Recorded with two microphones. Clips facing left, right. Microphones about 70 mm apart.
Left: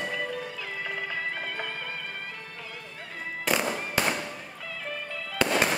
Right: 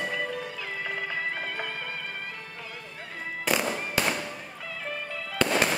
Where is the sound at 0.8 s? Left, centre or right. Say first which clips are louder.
Right 1 dB; centre.